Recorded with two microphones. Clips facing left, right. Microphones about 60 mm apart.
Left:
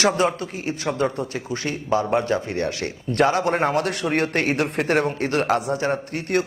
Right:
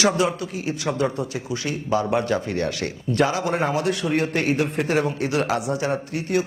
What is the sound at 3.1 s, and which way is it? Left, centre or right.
A man's voice, left.